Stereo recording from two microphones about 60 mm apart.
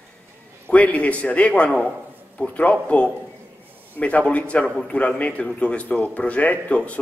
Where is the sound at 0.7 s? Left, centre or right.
Left.